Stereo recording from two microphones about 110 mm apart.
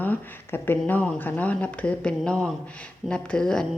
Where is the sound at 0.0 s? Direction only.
20° left (ahead or behind).